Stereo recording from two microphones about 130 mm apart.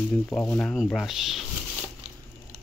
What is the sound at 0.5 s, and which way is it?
Speech, 10° left (ahead or behind).